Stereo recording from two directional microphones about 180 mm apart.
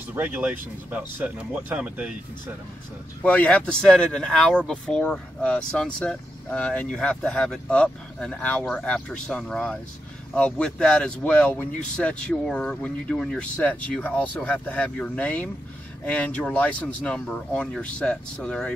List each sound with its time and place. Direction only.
0.1 s speech: 10° right (ahead or behind)
3.2 s speech: 10° left (ahead or behind)